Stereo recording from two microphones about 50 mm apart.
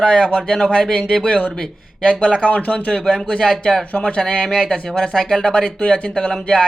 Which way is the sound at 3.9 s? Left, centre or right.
Left.